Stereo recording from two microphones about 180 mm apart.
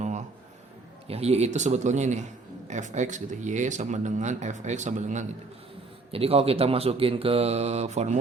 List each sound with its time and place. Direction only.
1.0 s speech: 35° right (ahead or behind)